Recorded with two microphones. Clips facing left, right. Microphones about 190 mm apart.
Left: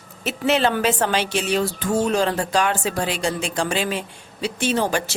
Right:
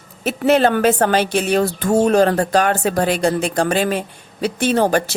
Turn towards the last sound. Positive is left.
turn(degrees=-55)  # may be behind; listen again after turning